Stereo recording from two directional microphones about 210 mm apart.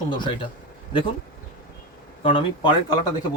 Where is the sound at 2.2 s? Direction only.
25° left (ahead or behind).